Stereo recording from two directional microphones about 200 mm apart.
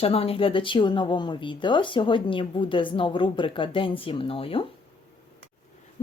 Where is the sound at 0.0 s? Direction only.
30° left (ahead or behind).